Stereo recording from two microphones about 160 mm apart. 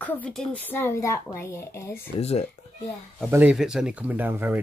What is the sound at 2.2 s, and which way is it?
Speech, 40° left (ahead or behind).